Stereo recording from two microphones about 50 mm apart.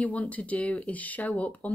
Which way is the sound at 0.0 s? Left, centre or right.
Left.